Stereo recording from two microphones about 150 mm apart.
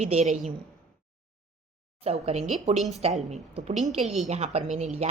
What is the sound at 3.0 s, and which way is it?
A woman's voice, 45° right (ahead or behind).